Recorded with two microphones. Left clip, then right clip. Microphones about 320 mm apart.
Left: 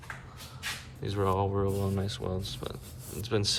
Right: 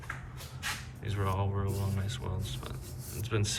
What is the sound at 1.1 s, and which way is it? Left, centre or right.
Speech, centre.